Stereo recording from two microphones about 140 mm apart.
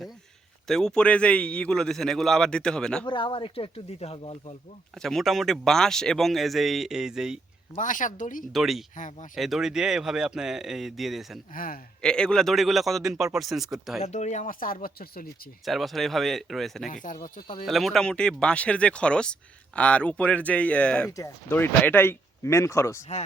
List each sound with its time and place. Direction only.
0.7 s a man's voice: 5° left (ahead or behind)
3.1 s speech: 35° left (ahead or behind)
5.0 s a man's voice: centre (ahead or behind)
7.8 s speech: 65° left (ahead or behind)
8.5 s a man's voice: centre (ahead or behind)
11.5 s a man's voice: 90° left
12.0 s a man's voice: 5° left (ahead or behind)
14.0 s speech: 55° left (ahead or behind); by 15.3 s 90° left
15.6 s a man's voice: centre (ahead or behind)
16.9 s speech: 70° left (ahead or behind)
17.7 s speech: centre (ahead or behind)
21.1 s speech: 20° left (ahead or behind)